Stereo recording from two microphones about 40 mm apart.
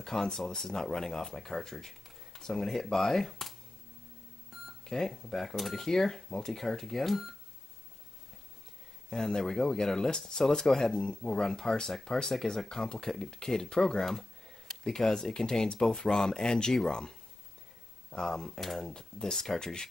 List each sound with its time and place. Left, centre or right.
0.0 s speech: centre
4.5 s a sound: centre
4.8 s speech: centre
9.1 s speech: centre
18.1 s speech: centre